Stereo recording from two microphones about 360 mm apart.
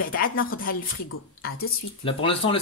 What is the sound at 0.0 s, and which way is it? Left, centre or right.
Speech, left.